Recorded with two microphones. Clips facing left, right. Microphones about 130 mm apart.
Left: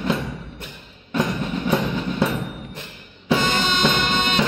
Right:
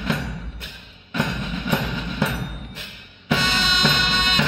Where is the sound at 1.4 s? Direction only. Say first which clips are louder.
Left 3 dB; 35° left (ahead or behind).